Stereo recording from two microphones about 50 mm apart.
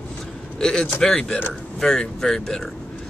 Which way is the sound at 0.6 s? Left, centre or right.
Centre.